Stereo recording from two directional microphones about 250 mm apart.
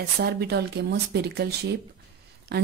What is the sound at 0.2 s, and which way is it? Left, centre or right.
Speech, right.